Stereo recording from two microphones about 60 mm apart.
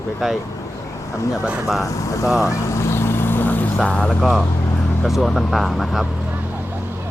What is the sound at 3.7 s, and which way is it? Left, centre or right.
Speech, centre.